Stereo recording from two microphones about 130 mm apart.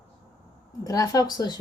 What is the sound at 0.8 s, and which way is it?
Speech, 25° left (ahead or behind).